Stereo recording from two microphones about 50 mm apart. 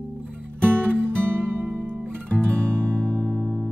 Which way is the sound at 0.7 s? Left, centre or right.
Right.